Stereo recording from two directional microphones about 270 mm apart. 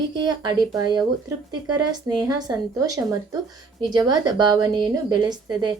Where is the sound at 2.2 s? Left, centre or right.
Centre.